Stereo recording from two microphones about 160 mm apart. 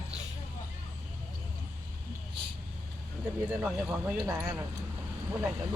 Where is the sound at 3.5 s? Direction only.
5° right (ahead or behind).